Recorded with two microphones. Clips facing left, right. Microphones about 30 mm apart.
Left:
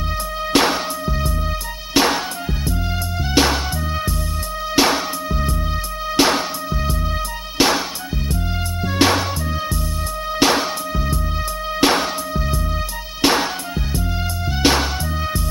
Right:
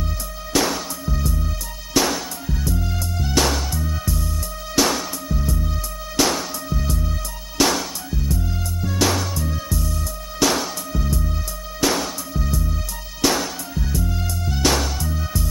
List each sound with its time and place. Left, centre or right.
0.5 s music: left
8.8 s music: left
10.4 s music: left